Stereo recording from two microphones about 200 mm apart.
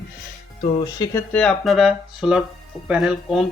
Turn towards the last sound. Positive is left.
turn(degrees=0)  # may be behind; listen again after turning